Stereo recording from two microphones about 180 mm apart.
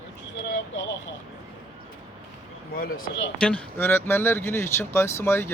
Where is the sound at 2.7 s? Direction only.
55° left (ahead or behind).